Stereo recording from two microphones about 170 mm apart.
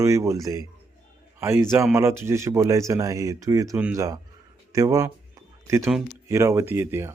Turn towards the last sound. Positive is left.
turn(degrees=-15)  # may be behind; listen again after turning